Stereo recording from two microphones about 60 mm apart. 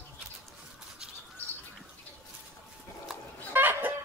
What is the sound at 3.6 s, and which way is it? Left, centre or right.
Chicken, right.